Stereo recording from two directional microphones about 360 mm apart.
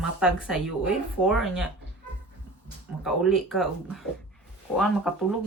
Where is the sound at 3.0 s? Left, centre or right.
Centre.